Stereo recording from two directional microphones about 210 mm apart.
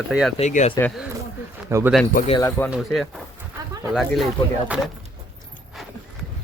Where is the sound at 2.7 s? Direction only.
Centre (ahead or behind).